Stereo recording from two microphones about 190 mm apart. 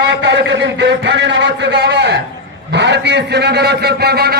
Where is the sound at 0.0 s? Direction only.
70° right (ahead or behind).